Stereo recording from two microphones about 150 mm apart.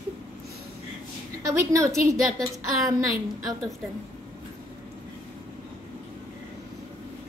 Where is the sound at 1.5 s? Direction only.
20° right (ahead or behind).